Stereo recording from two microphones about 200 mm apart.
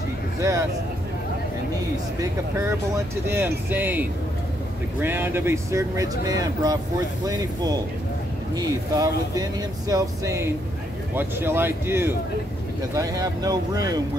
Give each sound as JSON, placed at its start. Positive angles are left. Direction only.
{"t": 0.4, "sound": "speech", "side_deg": -15}
{"t": 2.1, "sound": "speech", "side_deg": -15}
{"t": 5.0, "sound": "speech", "side_deg": -10}